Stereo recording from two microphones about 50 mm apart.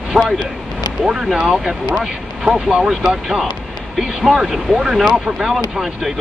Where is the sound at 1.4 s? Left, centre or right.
Centre.